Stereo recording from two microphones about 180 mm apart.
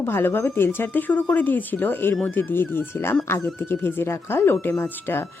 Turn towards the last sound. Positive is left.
turn(degrees=10)  # may be behind; listen again after turning